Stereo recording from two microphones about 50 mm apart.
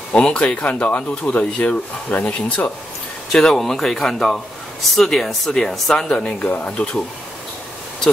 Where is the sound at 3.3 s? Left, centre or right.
Centre.